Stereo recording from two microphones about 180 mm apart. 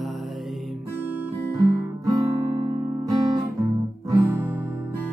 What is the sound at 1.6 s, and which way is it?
Guitar, 20° right (ahead or behind).